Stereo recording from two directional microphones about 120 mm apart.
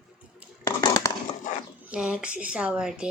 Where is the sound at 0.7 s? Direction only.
30° left (ahead or behind).